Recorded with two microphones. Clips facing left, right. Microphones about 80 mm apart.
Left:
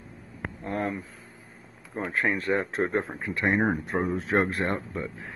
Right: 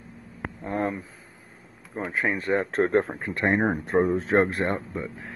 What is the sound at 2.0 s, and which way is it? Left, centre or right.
Speech, centre.